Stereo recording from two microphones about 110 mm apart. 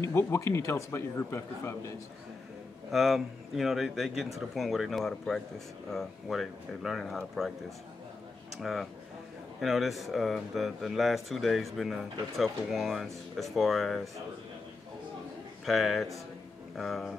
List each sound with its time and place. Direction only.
0.0 s speech: 25° left (ahead or behind)
2.9 s speech: centre (ahead or behind)
8.5 s speech: centre (ahead or behind)
15.6 s speech: centre (ahead or behind)